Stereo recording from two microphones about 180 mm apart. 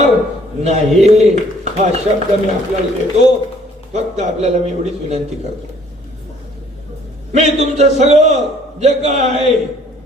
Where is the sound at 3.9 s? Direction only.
40° right (ahead or behind).